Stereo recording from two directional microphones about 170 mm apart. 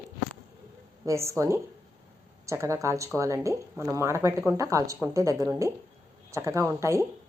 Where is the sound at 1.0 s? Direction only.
15° right (ahead or behind).